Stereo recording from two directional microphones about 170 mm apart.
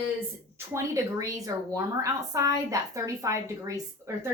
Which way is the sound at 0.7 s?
20° right (ahead or behind).